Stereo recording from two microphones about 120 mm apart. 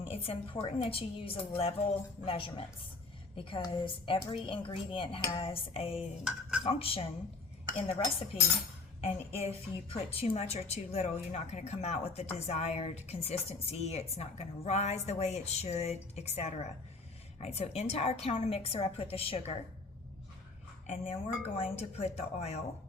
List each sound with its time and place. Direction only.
0.0 s a woman's voice: 55° left (ahead or behind)
6.0 s dishes: 5° right (ahead or behind)
6.7 s a woman's voice: 50° left (ahead or behind)
8.3 s a woman's voice: 55° left (ahead or behind)
20.8 s a woman's voice: 60° left (ahead or behind)